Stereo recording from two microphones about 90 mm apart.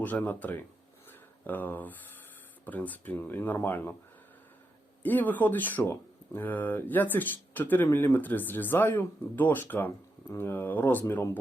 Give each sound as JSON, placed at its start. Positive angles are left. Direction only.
{"t": 0.0, "sound": "speech", "side_deg": 20}
{"t": 1.0, "sound": "a sound", "side_deg": 20}
{"t": 2.6, "sound": "speech", "side_deg": 20}
{"t": 5.0, "sound": "speech", "side_deg": 20}